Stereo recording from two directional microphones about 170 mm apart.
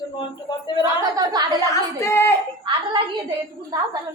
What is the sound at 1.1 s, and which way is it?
Speech, 25° right (ahead or behind).